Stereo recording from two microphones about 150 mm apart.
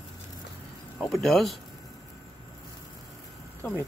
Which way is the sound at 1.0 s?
Centre (ahead or behind).